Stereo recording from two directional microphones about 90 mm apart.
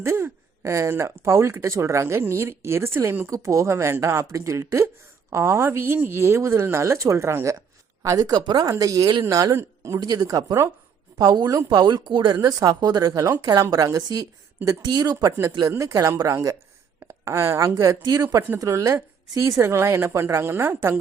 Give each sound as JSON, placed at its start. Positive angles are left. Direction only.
{"t": 0.0, "sound": "speech", "side_deg": -30}
{"t": 3.2, "sound": "speech", "side_deg": -35}
{"t": 8.0, "sound": "a woman's voice", "side_deg": -40}
{"t": 8.7, "sound": "speech", "side_deg": -40}
{"t": 10.0, "sound": "a woman's voice", "side_deg": -50}
{"t": 12.4, "sound": "a woman's voice", "side_deg": -45}